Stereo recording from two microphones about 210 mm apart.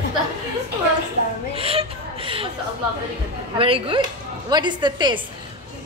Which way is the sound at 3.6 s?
25° right (ahead or behind).